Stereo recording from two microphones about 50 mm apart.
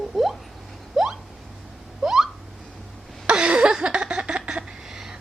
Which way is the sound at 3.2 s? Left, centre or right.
Centre.